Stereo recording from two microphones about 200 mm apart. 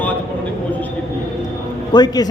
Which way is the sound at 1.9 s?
20° left (ahead or behind).